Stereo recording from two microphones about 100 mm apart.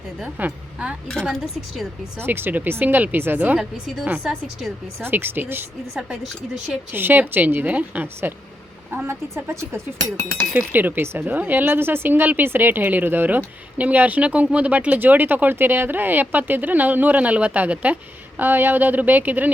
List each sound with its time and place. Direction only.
0.2 s speech: 15° right (ahead or behind)
1.3 s speech: centre (ahead or behind)
2.1 s a woman's voice: 20° right (ahead or behind)
3.6 s a woman's voice: 5° right (ahead or behind); by 5.6 s 20° right (ahead or behind)
5.9 s speech: 5° right (ahead or behind)
6.9 s a woman's voice: 20° right (ahead or behind)